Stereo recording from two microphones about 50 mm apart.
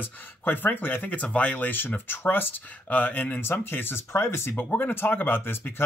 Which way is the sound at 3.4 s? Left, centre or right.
Left.